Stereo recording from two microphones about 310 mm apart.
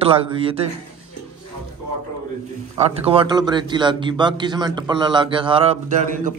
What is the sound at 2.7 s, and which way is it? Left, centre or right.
A man's voice, centre.